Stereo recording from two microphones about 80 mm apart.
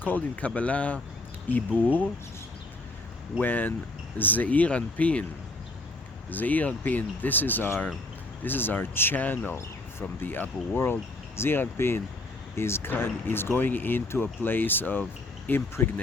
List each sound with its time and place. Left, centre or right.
0.0 s speech: left
3.4 s speech: left
6.3 s speech: left